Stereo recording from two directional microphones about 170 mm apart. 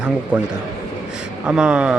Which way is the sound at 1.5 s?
5° right (ahead or behind).